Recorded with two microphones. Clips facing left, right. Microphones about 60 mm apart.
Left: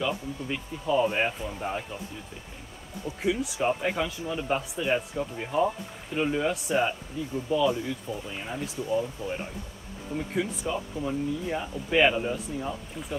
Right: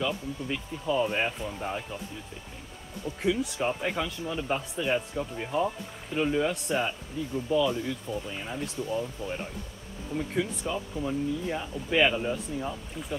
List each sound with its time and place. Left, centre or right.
0.0 s speech: centre
3.2 s speech: centre
9.2 s speech: left
10.1 s speech: centre